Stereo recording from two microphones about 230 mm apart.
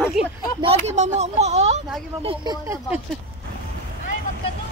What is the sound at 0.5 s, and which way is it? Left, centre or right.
Speech, right.